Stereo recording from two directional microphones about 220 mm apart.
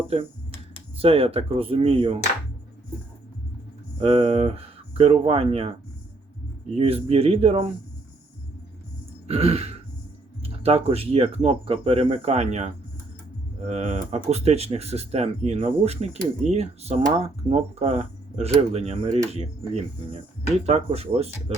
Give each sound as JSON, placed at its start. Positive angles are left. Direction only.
{"t": 0.9, "sound": "speech", "side_deg": -25}
{"t": 4.0, "sound": "speech", "side_deg": -25}
{"t": 6.7, "sound": "speech", "side_deg": -25}
{"t": 9.2, "sound": "a sound", "side_deg": -30}
{"t": 10.4, "sound": "speech", "side_deg": -25}